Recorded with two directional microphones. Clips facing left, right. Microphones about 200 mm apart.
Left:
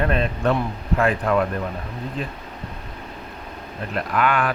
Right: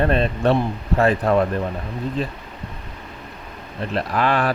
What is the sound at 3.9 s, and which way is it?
Speech, 35° right (ahead or behind).